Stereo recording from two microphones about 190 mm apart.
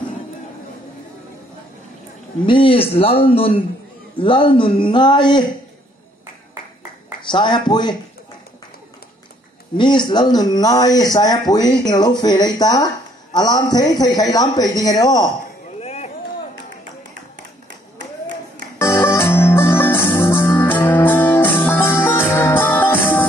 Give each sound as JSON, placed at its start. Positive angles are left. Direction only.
{"t": 2.4, "sound": "speech", "side_deg": 25}
{"t": 7.2, "sound": "speech", "side_deg": 25}
{"t": 9.8, "sound": "speech", "side_deg": 25}
{"t": 15.8, "sound": "a sound", "side_deg": 35}
{"t": 18.8, "sound": "music", "side_deg": 15}